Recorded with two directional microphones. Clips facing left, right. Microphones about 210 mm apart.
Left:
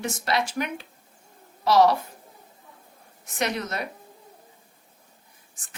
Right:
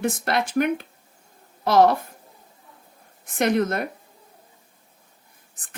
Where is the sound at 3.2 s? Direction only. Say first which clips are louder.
Right 8 dB; 55° right (ahead or behind).